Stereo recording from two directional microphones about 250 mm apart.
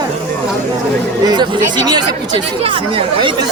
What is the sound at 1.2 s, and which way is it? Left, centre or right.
A woman's voice, centre.